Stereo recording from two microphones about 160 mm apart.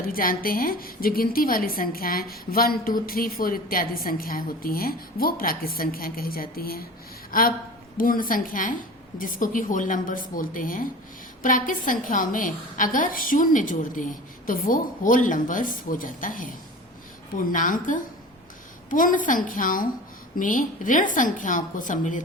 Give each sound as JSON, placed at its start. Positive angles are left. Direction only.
{"t": 0.1, "sound": "a woman's voice", "side_deg": 65}
{"t": 7.3, "sound": "a sound", "side_deg": 65}
{"t": 7.9, "sound": "a woman's voice", "side_deg": 60}